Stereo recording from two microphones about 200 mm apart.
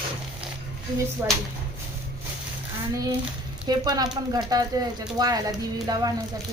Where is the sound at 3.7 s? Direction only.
20° right (ahead or behind).